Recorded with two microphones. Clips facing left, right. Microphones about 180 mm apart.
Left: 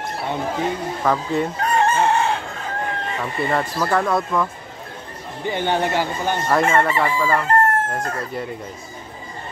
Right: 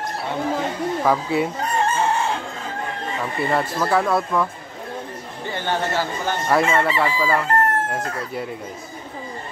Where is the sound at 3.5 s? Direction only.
5° right (ahead or behind).